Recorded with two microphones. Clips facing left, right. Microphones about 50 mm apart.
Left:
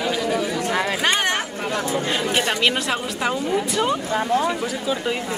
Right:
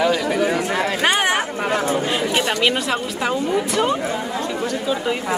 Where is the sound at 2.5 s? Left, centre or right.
Centre.